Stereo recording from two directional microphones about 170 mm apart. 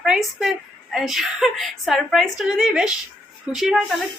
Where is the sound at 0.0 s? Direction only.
Centre (ahead or behind).